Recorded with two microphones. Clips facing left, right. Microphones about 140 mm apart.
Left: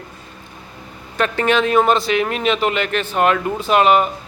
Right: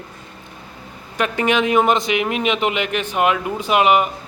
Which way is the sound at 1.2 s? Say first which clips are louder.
Left 1 dB; 15° right (ahead or behind).